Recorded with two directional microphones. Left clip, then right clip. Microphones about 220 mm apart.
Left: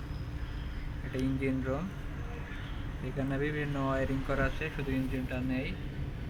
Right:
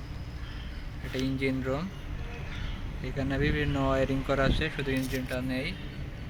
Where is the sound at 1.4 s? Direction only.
Centre (ahead or behind).